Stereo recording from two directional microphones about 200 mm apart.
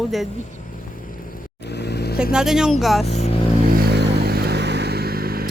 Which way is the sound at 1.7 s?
55° left (ahead or behind).